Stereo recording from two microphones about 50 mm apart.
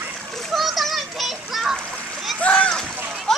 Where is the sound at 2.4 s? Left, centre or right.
Left.